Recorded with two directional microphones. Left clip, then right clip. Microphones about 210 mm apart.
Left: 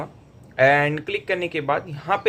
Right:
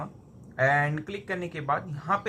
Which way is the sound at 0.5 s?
10° left (ahead or behind).